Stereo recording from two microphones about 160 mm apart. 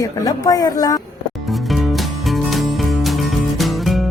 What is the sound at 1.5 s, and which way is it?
Music, centre (ahead or behind).